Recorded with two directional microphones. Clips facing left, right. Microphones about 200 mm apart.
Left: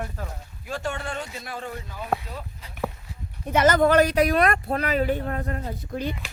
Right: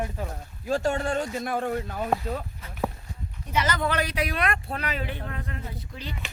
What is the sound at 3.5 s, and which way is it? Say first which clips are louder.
Speech: left 8 dB; 50° left (ahead or behind).